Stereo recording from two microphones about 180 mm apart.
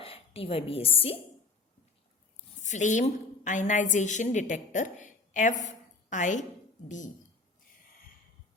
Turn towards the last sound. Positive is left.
turn(degrees=45)  # may be behind; listen again after turning